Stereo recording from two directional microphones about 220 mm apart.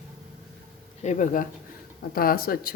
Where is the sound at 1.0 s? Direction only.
35° left (ahead or behind).